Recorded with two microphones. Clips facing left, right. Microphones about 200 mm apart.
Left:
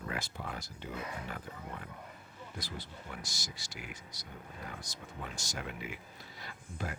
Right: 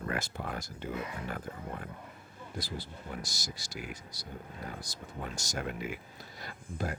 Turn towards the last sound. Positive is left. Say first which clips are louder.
# right 5 dB
turn(degrees=-40)  # may be behind; listen again after turning